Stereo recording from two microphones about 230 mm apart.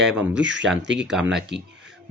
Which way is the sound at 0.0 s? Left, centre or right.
Centre.